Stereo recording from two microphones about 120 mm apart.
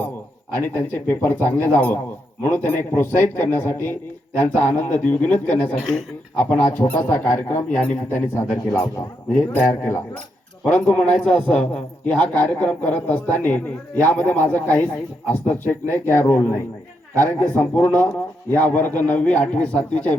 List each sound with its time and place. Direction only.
0.5 s a man's voice: 15° left (ahead or behind)
6.7 s a man's voice: 15° left (ahead or behind)
9.6 s a man's voice: 20° left (ahead or behind)